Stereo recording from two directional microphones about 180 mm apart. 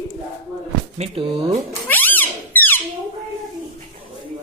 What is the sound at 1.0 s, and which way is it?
Speech, 30° right (ahead or behind).